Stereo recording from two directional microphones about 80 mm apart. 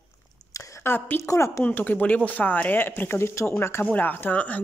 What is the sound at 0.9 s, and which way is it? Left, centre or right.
Speech, left.